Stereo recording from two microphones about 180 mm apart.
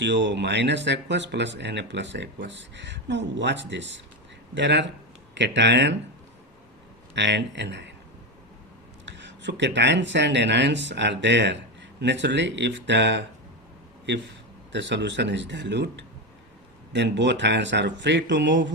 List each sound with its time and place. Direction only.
0.0 s speech: 80° right
7.2 s speech: 75° right (ahead or behind)
9.0 s speech: 80° right
14.7 s speech: 75° right (ahead or behind)